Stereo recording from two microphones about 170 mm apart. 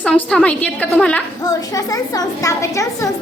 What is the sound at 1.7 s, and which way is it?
A child's voice, 20° left (ahead or behind).